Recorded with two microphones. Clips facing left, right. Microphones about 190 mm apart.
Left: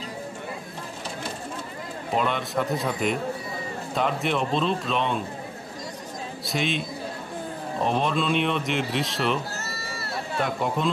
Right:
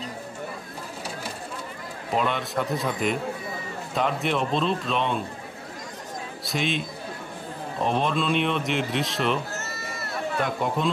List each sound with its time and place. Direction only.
2.1 s speech: centre (ahead or behind)
6.4 s speech: centre (ahead or behind)
9.7 s run: 35° left (ahead or behind)
10.4 s speech: centre (ahead or behind)